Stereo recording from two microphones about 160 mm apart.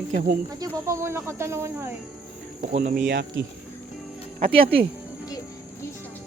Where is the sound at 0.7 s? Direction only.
15° right (ahead or behind).